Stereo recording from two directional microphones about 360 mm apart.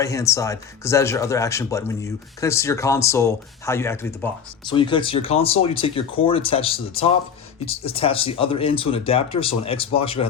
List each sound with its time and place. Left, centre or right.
0.0 s speech: centre